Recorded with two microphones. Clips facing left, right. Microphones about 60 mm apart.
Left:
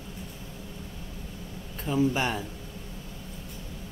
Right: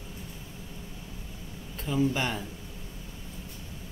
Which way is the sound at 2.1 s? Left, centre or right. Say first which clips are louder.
Left 2 dB; centre.